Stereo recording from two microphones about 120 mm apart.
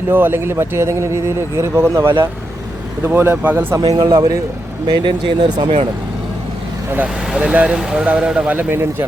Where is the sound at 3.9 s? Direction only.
35° right (ahead or behind).